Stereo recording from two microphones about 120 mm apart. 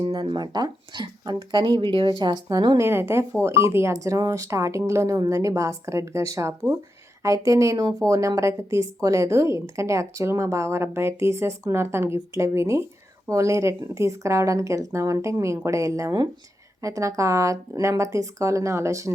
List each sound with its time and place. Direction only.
0.1 s speech: 35° right (ahead or behind)
2.7 s a woman's voice: 20° right (ahead or behind)